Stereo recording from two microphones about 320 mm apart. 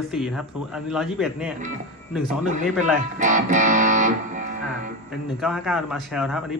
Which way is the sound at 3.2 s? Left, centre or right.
Right.